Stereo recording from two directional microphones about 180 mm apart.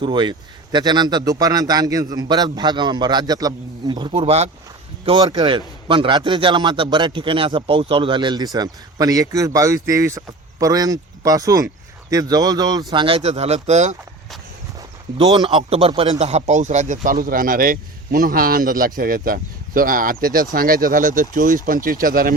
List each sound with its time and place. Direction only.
0.0 s speech: 25° right (ahead or behind)
14.8 s speech: 20° right (ahead or behind)
16.1 s a man's voice: 40° right (ahead or behind)